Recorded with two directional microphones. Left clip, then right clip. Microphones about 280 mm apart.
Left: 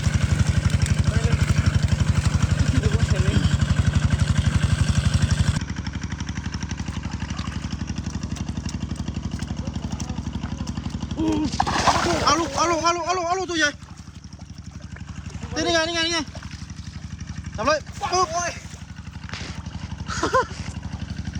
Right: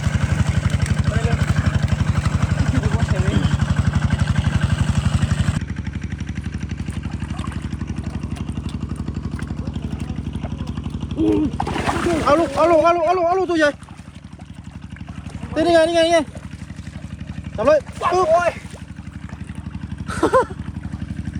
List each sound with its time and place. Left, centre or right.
0.1 s vehicle: centre
0.8 s vehicle: centre
1.1 s vehicle: centre
2.8 s vehicle: centre
3.2 s vehicle: centre
5.6 s vehicle: left
9.6 s vehicle: left
12.2 s speech: centre
15.5 s speech: centre
17.6 s speech: centre
20.1 s a sound: centre